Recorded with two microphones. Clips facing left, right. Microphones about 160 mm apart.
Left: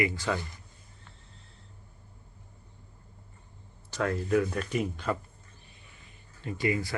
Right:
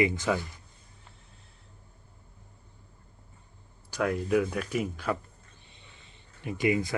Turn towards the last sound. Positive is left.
turn(degrees=-20)  # may be behind; listen again after turning